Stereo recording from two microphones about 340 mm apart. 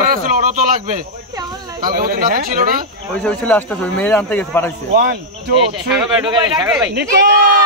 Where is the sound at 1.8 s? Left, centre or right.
Right.